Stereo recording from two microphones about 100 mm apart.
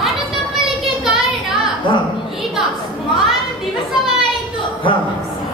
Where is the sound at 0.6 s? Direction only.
5° right (ahead or behind).